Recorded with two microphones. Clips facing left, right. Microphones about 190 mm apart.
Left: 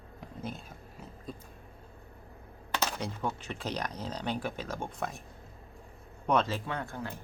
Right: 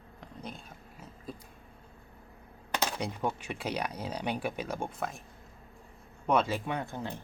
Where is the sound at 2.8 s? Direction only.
15° right (ahead or behind).